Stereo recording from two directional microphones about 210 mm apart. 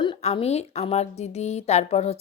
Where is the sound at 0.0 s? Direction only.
25° left (ahead or behind).